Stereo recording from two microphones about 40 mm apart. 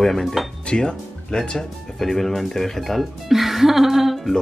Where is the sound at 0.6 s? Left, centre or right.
Left; by 4.4 s centre.